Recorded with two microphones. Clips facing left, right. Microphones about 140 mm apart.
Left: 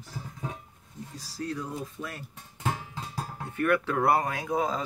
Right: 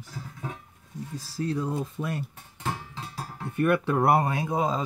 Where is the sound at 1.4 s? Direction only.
25° right (ahead or behind).